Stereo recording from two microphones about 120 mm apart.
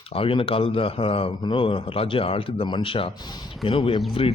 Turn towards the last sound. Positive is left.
turn(degrees=45)  # may be behind; listen again after turning